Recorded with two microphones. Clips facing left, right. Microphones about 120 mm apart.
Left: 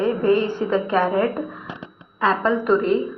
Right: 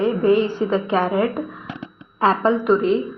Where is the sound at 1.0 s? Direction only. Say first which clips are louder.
Even; 10° right (ahead or behind).